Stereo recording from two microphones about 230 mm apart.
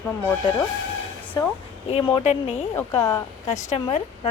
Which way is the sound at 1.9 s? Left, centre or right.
Left.